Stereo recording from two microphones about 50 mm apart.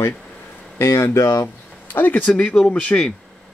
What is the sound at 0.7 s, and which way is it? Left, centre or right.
Speech, left.